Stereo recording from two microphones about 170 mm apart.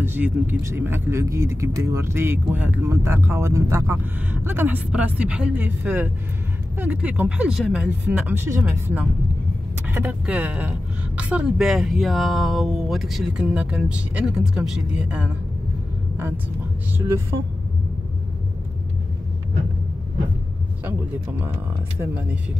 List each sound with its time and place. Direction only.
0.0 s speech: 10° right (ahead or behind)
20.8 s speech: 10° right (ahead or behind)